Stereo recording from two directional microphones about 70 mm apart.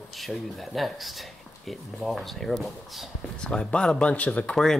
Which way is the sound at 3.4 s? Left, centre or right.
Centre.